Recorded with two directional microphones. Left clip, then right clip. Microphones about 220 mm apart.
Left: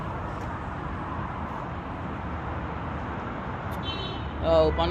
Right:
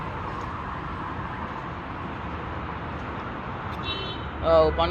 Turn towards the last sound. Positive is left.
turn(degrees=15)  # may be behind; listen again after turning